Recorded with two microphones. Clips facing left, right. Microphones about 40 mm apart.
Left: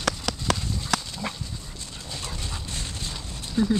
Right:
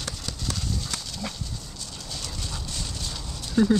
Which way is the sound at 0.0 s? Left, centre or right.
Left.